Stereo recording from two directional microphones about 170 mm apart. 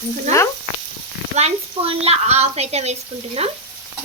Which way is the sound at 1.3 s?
40° right (ahead or behind).